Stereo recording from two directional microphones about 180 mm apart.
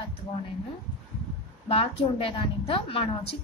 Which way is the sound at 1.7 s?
30° left (ahead or behind).